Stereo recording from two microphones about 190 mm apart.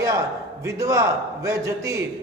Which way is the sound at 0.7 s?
15° right (ahead or behind).